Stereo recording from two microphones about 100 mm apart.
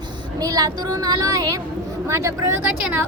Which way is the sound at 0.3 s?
40° right (ahead or behind).